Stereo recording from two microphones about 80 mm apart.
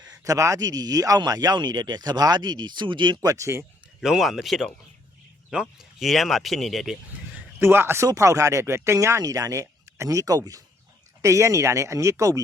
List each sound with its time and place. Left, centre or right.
0.3 s speech: right
3.2 s speech: right
3.6 s speech: centre
7.6 s speech: right
8.0 s speech: right
11.2 s speech: right